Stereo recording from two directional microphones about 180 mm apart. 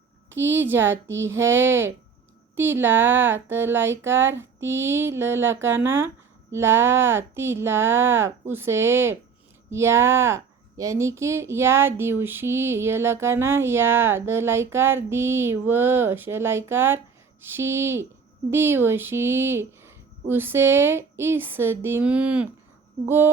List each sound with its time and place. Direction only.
0.5 s speech: 10° right (ahead or behind)
4.6 s a sound: 90° right
4.9 s speech: 15° right (ahead or behind)